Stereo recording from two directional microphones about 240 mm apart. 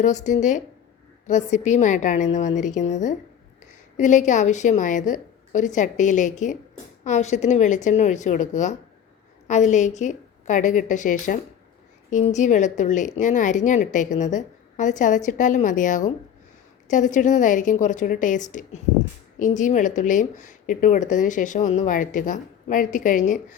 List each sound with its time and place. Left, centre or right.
0.0 s speech: left